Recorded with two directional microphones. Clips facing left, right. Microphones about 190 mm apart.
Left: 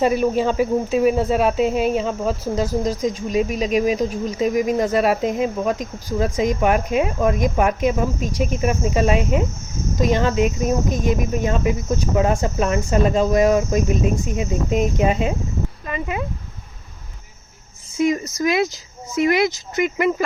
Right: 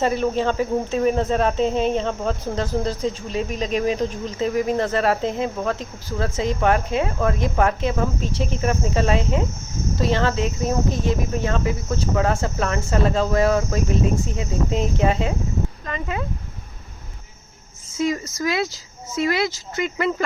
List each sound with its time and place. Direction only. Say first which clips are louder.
0.0 s speech: left 3 dB; 10° left (ahead or behind)
17.9 s speech: left 4 dB; 20° left (ahead or behind)